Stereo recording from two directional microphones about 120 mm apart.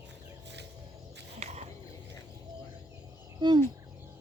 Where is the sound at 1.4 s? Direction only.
65° right (ahead or behind).